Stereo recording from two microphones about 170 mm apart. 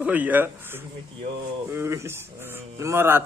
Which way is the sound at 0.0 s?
10° right (ahead or behind).